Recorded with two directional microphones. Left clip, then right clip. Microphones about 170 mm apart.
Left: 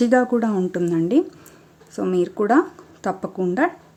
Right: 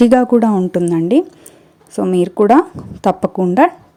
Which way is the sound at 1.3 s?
15° right (ahead or behind).